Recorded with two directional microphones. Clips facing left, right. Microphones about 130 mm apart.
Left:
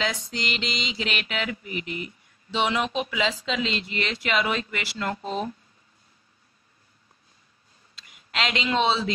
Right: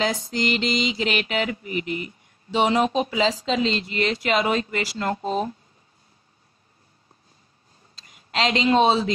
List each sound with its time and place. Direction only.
0.0 s speech: 40° right (ahead or behind)
7.9 s speech: 35° right (ahead or behind)